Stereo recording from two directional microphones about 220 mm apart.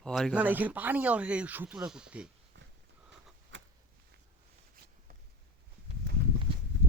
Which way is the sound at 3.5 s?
55° right (ahead or behind).